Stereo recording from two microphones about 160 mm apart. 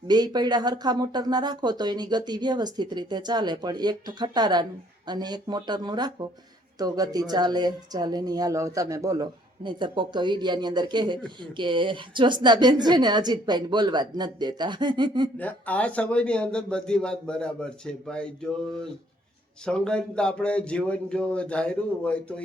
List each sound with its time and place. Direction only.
0.1 s a woman's voice: 25° right (ahead or behind)
15.4 s a man's voice: 10° left (ahead or behind)
19.6 s speech: 5° left (ahead or behind)